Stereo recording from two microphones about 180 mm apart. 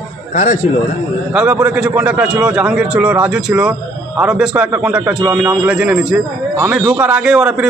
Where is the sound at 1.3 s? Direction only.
10° right (ahead or behind).